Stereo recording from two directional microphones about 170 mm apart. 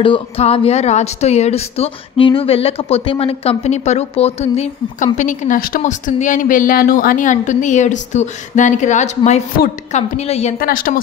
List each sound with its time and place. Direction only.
0.0 s a woman's voice: 35° left (ahead or behind); by 5.8 s 55° left (ahead or behind)
5.8 s a woman's voice: 45° left (ahead or behind)
10.6 s speech: 55° left (ahead or behind)